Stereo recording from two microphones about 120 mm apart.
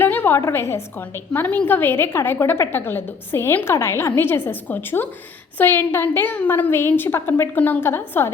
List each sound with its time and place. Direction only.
0.0 s a woman's voice: 15° left (ahead or behind)